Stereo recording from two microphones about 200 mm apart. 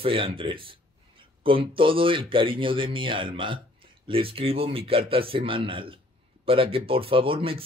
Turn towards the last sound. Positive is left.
turn(degrees=-25)  # may be behind; listen again after turning